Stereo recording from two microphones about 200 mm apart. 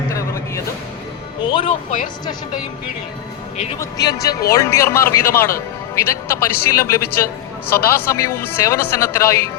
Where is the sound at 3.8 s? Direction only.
20° left (ahead or behind).